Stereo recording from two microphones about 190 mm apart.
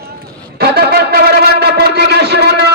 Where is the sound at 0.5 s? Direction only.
60° right (ahead or behind).